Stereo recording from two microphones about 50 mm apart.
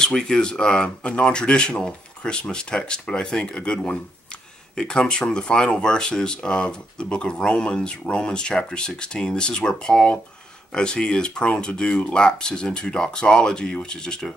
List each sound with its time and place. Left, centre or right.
0.0 s speech: centre